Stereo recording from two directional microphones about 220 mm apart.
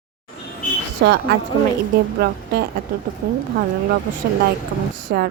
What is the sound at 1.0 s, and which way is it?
Speech, 50° right (ahead or behind).